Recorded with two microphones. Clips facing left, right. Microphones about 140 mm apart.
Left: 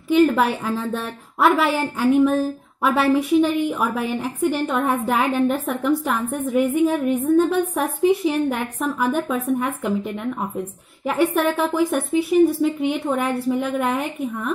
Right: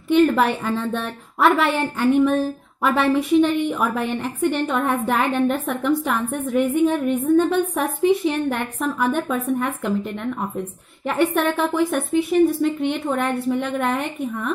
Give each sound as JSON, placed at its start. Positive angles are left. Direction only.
{"t": 0.1, "sound": "a woman's voice", "side_deg": 0}